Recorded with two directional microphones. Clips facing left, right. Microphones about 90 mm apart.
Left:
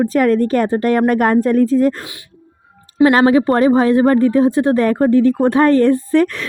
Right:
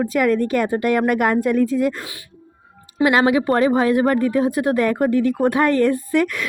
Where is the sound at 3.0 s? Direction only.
35° left (ahead or behind).